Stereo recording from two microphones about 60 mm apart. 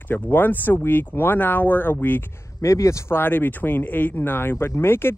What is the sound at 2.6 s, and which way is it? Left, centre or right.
Speech, left.